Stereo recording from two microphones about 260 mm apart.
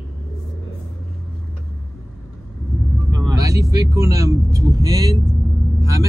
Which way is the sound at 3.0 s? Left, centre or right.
Centre.